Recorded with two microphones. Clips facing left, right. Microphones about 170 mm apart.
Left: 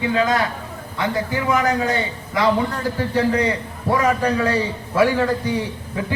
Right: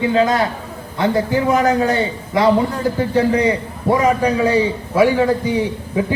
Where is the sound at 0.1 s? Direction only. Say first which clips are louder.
Right 1 dB; 25° right (ahead or behind).